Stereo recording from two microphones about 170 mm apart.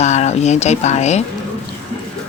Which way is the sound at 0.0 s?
40° left (ahead or behind).